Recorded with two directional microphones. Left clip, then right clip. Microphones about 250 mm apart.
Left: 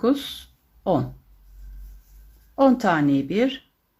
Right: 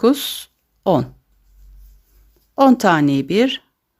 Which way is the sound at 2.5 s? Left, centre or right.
Right.